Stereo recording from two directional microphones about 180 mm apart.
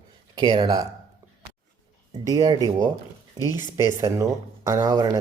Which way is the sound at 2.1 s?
20° right (ahead or behind).